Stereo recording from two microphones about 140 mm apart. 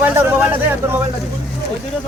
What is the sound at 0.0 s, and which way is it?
Speech, 10° right (ahead or behind).